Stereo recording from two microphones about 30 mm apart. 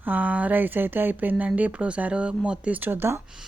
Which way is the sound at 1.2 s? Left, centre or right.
Right.